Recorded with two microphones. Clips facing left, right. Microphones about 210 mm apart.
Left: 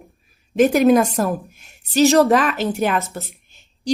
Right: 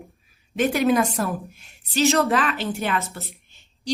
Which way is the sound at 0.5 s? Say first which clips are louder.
Left 6 dB; 45° left (ahead or behind).